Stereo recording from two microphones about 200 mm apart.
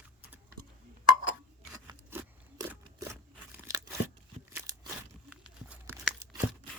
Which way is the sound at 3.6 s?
15° right (ahead or behind).